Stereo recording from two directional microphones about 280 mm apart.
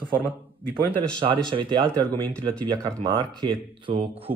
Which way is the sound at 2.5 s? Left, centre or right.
Centre.